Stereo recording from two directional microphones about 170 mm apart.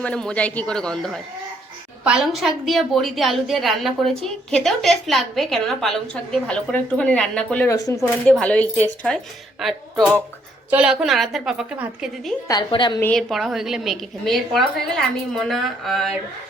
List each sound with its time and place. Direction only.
0.0 s a woman's voice: 5° left (ahead or behind)
7.8 s a woman's voice: 20° left (ahead or behind)
8.3 s a woman's voice: 10° left (ahead or behind)
12.5 s a woman's voice: 25° left (ahead or behind)
13.0 s a woman's voice: 5° left (ahead or behind)